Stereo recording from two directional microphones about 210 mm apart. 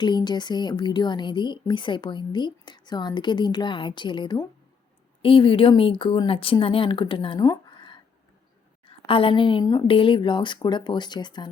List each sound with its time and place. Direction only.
0.0 s a woman's voice: 20° left (ahead or behind)